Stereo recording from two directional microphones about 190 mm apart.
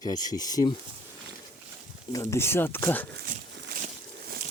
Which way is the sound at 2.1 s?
15° left (ahead or behind).